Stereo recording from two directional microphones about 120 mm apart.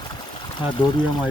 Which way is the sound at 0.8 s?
45° left (ahead or behind).